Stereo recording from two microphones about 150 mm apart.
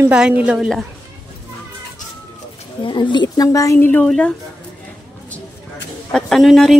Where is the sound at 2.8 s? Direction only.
30° left (ahead or behind); by 4.3 s 5° left (ahead or behind).